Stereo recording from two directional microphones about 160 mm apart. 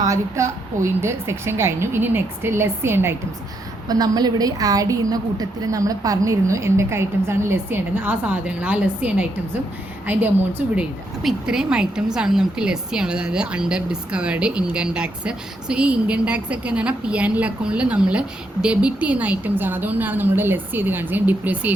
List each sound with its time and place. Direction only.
0.0 s a woman's voice: 20° right (ahead or behind)